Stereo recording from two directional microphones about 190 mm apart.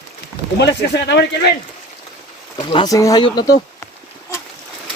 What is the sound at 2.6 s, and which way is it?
Speech, 25° left (ahead or behind).